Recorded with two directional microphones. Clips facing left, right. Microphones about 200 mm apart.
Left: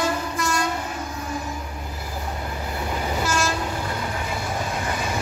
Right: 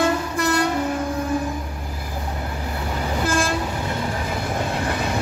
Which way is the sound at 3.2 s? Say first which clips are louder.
Right 4 dB; 50° right (ahead or behind).